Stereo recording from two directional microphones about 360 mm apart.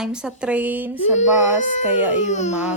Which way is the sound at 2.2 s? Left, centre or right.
Centre.